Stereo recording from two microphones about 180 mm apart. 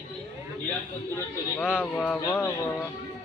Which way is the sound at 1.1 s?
15° left (ahead or behind).